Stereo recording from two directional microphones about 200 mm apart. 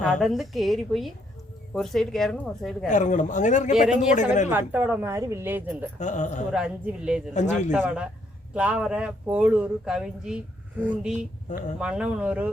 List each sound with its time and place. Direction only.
0.0 s speech: centre (ahead or behind)
2.8 s a man's voice: 40° left (ahead or behind)
4.4 s a woman's voice: 10° right (ahead or behind)
6.0 s a man's voice: 35° left (ahead or behind)
6.5 s a woman's voice: 5° right (ahead or behind)